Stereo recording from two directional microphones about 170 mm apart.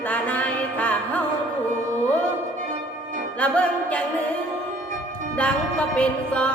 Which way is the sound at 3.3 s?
10° left (ahead or behind).